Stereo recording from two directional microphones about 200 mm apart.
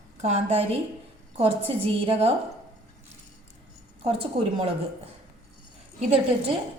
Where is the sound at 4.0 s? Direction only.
30° right (ahead or behind).